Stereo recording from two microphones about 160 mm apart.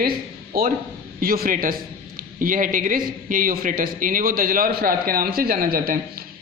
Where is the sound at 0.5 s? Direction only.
70° right (ahead or behind).